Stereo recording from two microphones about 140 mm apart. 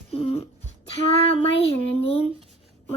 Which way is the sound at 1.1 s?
45° left (ahead or behind).